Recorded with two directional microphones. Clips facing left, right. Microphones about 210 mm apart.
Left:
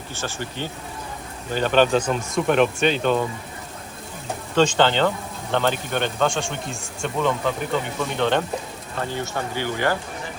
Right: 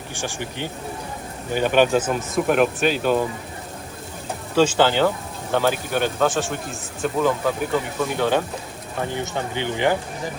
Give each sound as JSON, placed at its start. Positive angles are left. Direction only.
{"t": 0.1, "sound": "speech", "side_deg": -15}
{"t": 4.5, "sound": "speech", "side_deg": -10}
{"t": 9.0, "sound": "speech", "side_deg": -15}